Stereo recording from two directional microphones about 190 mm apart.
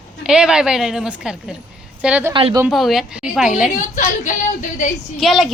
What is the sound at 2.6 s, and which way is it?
A woman's voice, centre (ahead or behind).